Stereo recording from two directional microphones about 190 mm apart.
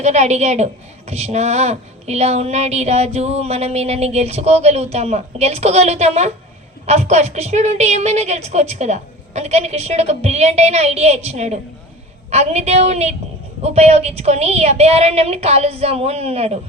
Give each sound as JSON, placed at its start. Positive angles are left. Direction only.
{"t": 0.0, "sound": "a woman's voice", "side_deg": -35}